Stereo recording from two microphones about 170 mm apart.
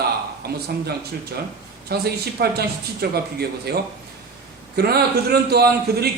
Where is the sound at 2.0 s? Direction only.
65° right (ahead or behind).